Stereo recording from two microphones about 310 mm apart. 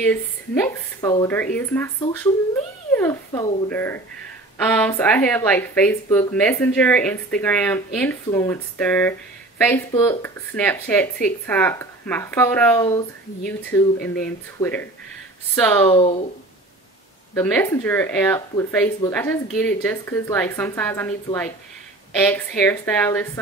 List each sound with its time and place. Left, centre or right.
0.0 s speech: centre
2.9 s speech: centre
15.9 s speech: centre
17.3 s speech: centre